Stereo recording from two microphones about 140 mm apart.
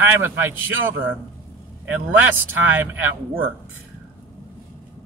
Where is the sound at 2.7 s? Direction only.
15° right (ahead or behind).